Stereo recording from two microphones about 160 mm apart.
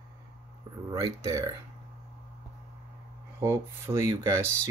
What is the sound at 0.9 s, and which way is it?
Speech, 20° right (ahead or behind).